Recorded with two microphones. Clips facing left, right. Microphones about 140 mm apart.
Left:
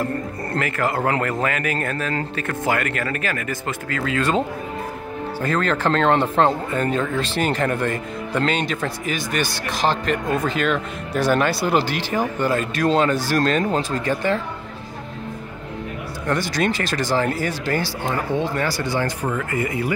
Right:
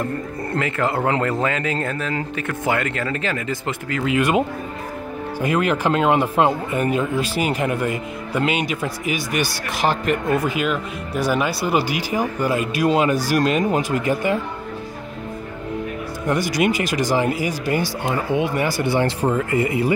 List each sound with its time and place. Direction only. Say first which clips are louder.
0.6 s speech: right 1 dB; 25° right (ahead or behind)
16.3 s speech: right 2 dB; 15° right (ahead or behind)